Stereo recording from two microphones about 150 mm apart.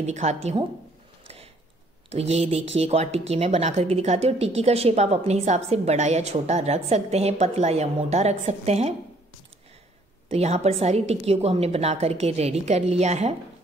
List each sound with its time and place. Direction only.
0.0 s speech: 50° right (ahead or behind)
1.2 s a sound: 40° right (ahead or behind)
2.0 s speech: 45° right (ahead or behind)
10.2 s speech: 45° right (ahead or behind)